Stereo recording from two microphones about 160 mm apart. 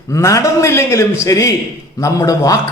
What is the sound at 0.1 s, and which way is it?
A man's voice, 20° left (ahead or behind).